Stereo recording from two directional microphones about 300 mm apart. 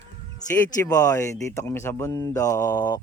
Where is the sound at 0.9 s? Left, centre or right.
Centre.